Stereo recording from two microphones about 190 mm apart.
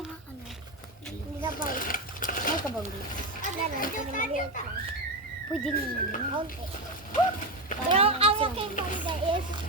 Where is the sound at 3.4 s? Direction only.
45° left (ahead or behind).